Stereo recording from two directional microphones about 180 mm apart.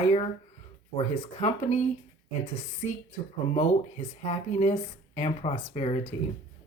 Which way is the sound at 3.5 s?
40° left (ahead or behind).